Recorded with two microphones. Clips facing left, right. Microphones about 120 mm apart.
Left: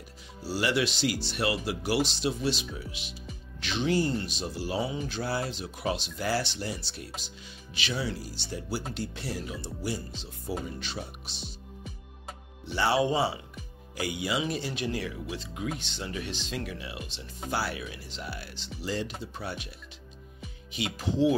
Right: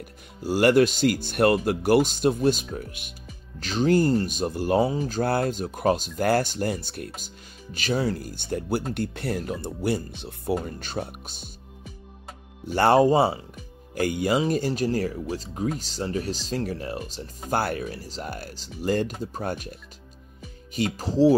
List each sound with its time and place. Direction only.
0.4 s speech: 50° right (ahead or behind)
12.6 s speech: 50° right (ahead or behind)
20.7 s speech: 40° right (ahead or behind)